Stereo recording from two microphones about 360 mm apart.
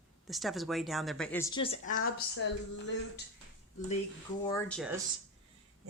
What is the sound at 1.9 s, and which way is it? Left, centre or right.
Speech, left.